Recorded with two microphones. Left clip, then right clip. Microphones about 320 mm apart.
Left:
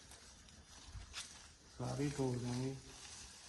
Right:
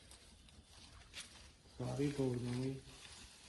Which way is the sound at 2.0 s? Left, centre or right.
Centre.